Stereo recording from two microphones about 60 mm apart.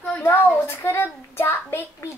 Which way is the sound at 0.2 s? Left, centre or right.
Left.